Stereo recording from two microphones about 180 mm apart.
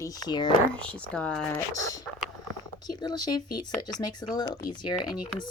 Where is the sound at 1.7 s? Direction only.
20° left (ahead or behind).